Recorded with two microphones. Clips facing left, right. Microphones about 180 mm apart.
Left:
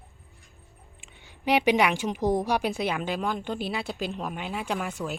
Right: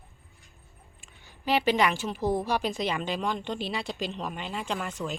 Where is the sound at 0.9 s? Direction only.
20° left (ahead or behind).